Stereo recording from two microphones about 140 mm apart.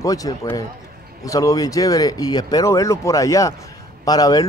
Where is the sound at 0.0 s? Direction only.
25° left (ahead or behind).